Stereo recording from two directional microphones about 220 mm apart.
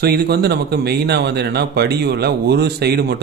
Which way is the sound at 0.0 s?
45° right (ahead or behind).